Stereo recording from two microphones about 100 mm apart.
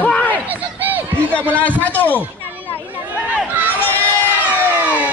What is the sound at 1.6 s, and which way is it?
Speech, 15° left (ahead or behind).